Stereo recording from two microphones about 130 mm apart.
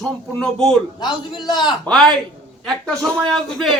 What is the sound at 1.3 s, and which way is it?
Speech, 35° left (ahead or behind).